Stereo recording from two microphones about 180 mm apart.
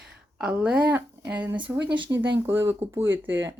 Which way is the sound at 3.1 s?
90° right.